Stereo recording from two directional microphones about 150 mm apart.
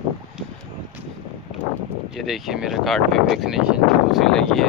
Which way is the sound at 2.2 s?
Centre (ahead or behind).